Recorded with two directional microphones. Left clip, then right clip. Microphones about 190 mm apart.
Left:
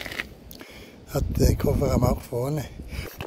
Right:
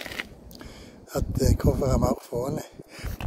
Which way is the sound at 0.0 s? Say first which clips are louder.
Left 2 dB; 15° right (ahead or behind).